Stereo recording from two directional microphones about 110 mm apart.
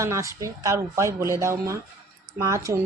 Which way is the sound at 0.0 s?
30° right (ahead or behind).